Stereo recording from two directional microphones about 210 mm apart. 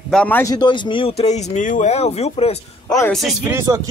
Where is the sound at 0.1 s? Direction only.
5° left (ahead or behind); by 2.5 s 30° left (ahead or behind).